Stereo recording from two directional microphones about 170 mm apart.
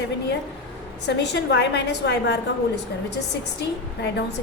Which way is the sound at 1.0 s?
90° left.